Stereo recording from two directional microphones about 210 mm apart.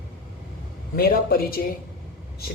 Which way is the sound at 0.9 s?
45° left (ahead or behind).